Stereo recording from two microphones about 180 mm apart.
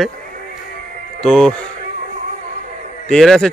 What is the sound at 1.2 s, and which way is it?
Speech, centre (ahead or behind).